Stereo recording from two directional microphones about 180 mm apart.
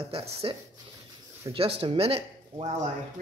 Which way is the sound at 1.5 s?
20° right (ahead or behind).